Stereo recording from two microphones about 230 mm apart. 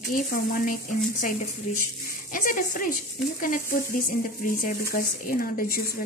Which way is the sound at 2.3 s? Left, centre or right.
Left.